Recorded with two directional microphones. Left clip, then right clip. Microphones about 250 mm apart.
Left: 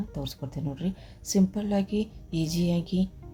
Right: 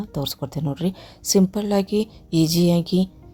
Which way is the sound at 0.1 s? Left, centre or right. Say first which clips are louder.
Right 9 dB; right.